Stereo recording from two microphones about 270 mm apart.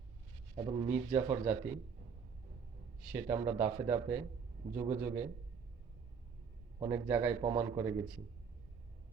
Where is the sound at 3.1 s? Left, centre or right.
Centre.